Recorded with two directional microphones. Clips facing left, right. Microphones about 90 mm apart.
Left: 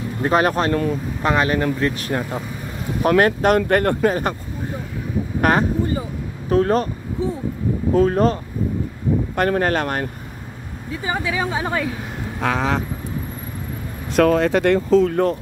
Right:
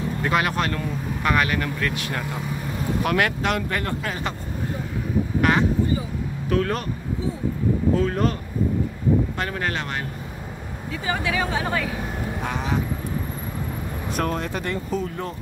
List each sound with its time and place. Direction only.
0.2 s speech: 35° left (ahead or behind)
4.0 s speech: 40° left (ahead or behind)
5.4 s speech: 45° left (ahead or behind)
7.9 s speech: 40° left (ahead or behind)
9.4 s speech: 45° left (ahead or behind)
11.1 s speech: 25° left (ahead or behind)
12.4 s speech: 90° left
14.1 s speech: 90° left; by 15.3 s 65° left (ahead or behind)